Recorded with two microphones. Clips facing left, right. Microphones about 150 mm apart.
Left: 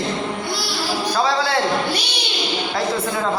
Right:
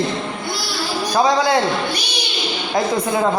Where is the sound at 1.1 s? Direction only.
15° right (ahead or behind).